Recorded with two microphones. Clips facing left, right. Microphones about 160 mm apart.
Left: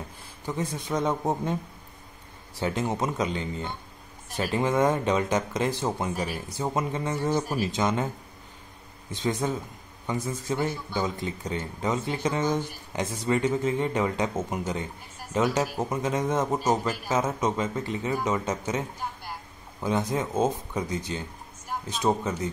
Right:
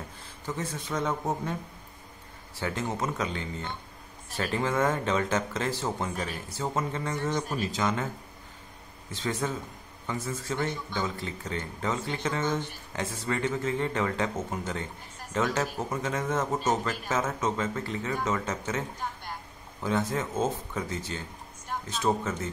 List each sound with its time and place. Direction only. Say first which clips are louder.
0.5 s speech: left 4 dB; 15° left (ahead or behind)
2.6 s speech: left 4 dB; 20° left (ahead or behind)
7.7 s speech: left 3 dB; 20° left (ahead or behind)
9.1 s a man's voice: left 3 dB; 15° left (ahead or behind)